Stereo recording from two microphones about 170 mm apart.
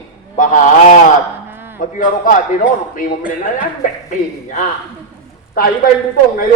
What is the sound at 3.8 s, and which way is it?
Speech, 50° left (ahead or behind).